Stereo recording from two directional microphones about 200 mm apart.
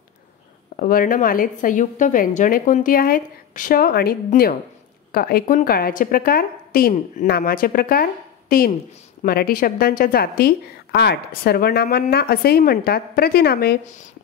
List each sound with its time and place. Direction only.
0.7 s speech: 45° left (ahead or behind)